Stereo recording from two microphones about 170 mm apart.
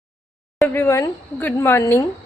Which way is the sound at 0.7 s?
15° left (ahead or behind).